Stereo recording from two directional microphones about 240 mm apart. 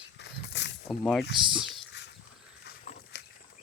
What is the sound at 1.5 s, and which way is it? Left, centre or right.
Dog, centre.